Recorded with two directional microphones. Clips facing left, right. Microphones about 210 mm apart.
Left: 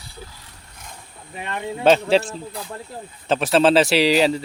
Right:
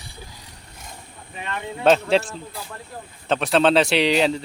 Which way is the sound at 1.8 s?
Centre (ahead or behind).